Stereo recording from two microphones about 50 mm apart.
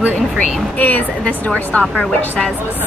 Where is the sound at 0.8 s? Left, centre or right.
Left.